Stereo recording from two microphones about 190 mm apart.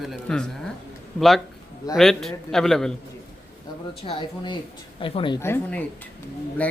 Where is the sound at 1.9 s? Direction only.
Centre (ahead or behind).